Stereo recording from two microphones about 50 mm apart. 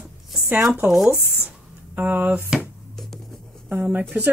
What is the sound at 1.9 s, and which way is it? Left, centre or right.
Speech, right.